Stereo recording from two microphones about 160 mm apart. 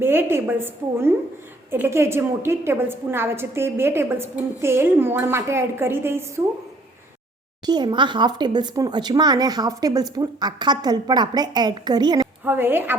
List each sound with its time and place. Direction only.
0.0 s a woman's voice: 15° right (ahead or behind)
7.6 s speech: 25° right (ahead or behind)
12.5 s a woman's voice: 15° right (ahead or behind)